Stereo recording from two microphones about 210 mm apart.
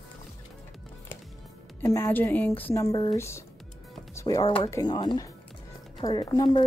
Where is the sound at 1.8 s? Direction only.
10° left (ahead or behind).